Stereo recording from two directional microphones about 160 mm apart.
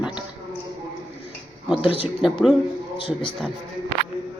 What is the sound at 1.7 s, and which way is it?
Speech, 5° right (ahead or behind).